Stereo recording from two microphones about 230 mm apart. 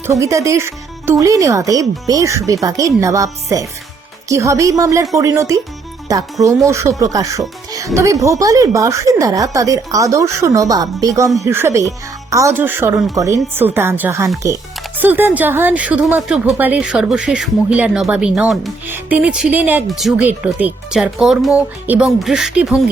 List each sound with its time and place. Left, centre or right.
0.1 s a woman's voice: centre